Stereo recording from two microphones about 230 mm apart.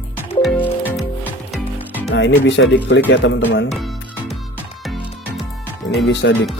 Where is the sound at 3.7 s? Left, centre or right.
Centre.